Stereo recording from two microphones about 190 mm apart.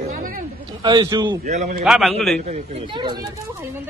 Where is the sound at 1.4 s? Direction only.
40° right (ahead or behind).